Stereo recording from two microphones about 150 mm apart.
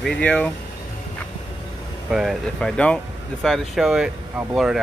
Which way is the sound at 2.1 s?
5° right (ahead or behind).